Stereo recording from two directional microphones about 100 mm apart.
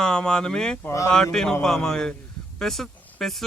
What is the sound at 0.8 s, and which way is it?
Speech, 30° left (ahead or behind).